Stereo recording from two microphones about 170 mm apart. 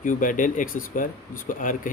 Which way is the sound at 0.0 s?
50° left (ahead or behind).